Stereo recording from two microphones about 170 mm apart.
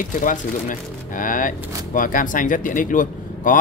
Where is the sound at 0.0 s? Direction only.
50° left (ahead or behind).